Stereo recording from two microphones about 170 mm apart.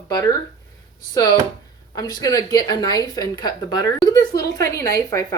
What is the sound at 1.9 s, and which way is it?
A woman's voice, 25° left (ahead or behind).